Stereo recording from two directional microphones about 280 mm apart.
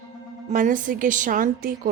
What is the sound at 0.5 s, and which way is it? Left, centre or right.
A woman's voice, right.